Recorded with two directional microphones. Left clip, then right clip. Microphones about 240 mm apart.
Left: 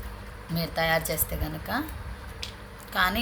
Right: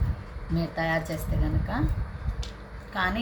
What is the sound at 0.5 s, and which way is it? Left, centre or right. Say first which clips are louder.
Speech: left 2 dB; left.